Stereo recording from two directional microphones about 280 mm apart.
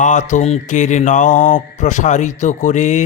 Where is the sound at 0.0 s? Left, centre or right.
Left.